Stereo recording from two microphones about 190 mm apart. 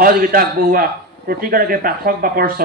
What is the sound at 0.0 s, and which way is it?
A man's voice, 50° right (ahead or behind).